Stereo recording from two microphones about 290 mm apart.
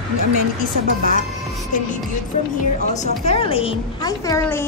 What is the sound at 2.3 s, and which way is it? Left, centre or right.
A woman's voice, left.